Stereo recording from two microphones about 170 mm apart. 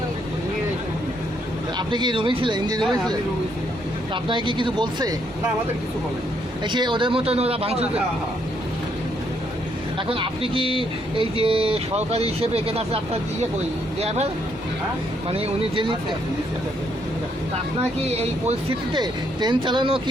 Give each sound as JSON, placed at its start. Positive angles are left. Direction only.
{"t": 1.9, "sound": "speech", "side_deg": -25}
{"t": 4.1, "sound": "speech", "side_deg": -30}
{"t": 6.7, "sound": "speech", "side_deg": -25}
{"t": 10.1, "sound": "speech", "side_deg": -30}
{"t": 15.3, "sound": "speech", "side_deg": -35}
{"t": 18.0, "sound": "speech", "side_deg": -40}
{"t": 18.9, "sound": "speech", "side_deg": -25}